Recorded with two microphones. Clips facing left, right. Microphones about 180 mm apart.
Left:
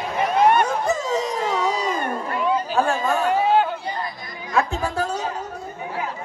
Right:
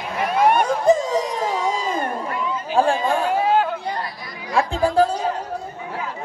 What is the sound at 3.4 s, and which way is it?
Chatter, centre (ahead or behind).